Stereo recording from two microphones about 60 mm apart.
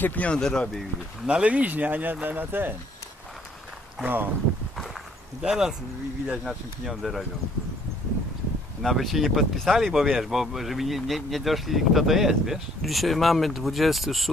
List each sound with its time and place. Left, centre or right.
0.0 s speech: left
0.3 s speech: centre
1.2 s speech: centre; by 2.7 s right
4.0 s speech: right
5.4 s speech: centre
8.8 s speech: centre